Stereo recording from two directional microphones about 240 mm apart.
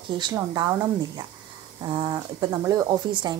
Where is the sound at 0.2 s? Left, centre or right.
Centre.